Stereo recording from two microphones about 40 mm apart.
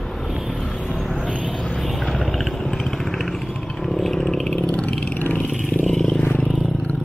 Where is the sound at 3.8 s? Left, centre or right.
Centre.